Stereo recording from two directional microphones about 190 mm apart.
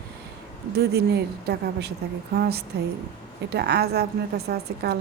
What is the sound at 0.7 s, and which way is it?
A woman's voice, 55° right (ahead or behind).